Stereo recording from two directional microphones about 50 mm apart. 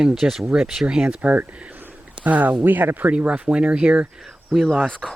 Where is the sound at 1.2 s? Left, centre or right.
Right.